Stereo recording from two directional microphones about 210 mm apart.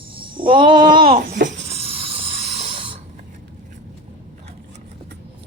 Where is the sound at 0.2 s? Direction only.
25° right (ahead or behind).